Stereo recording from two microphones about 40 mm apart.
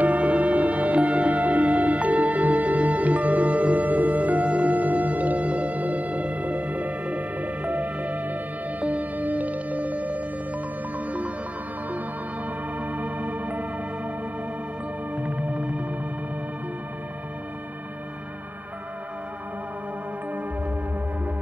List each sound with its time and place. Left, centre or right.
0.0 s music: right
12.8 s music: right
15.1 s music: right